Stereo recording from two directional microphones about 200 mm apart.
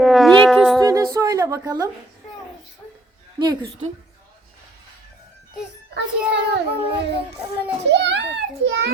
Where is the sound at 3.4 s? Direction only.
20° right (ahead or behind).